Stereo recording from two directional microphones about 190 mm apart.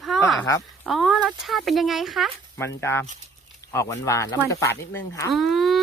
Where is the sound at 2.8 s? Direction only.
15° left (ahead or behind).